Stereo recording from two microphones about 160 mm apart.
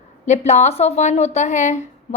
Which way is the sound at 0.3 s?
45° left (ahead or behind).